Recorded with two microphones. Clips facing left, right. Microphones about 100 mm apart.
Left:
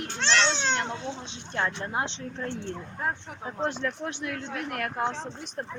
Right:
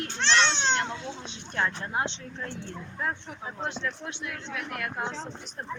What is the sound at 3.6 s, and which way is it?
Speech, 40° left (ahead or behind).